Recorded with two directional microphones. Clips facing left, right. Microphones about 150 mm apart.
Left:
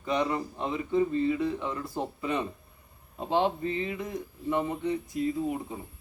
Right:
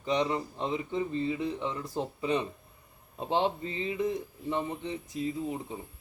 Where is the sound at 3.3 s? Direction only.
20° right (ahead or behind).